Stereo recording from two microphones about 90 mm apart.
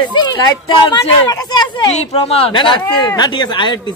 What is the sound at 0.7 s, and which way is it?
Speech, 60° left (ahead or behind).